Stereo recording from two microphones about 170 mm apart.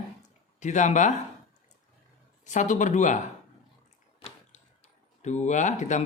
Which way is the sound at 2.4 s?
45° left (ahead or behind).